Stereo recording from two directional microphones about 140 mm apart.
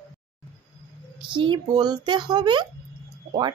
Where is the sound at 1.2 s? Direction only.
35° right (ahead or behind).